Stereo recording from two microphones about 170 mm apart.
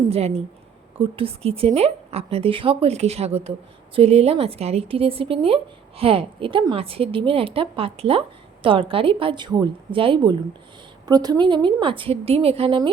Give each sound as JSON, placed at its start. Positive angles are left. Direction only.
{"t": 0.0, "sound": "a woman's voice", "side_deg": -35}